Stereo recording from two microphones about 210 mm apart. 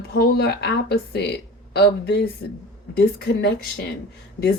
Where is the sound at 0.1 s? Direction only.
50° left (ahead or behind).